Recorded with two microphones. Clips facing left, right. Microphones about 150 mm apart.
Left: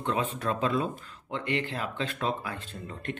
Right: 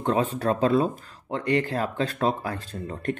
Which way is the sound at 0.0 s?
35° right (ahead or behind).